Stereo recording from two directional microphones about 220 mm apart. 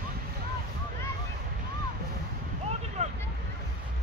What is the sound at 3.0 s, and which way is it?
Vehicle, 30° right (ahead or behind).